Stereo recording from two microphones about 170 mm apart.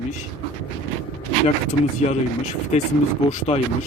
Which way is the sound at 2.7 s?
40° left (ahead or behind).